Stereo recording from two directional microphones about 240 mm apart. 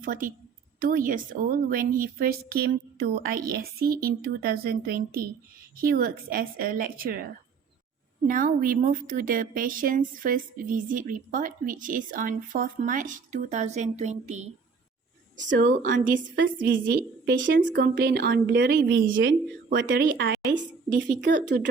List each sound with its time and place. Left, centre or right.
0.0 s speech: right
8.3 s a woman's voice: right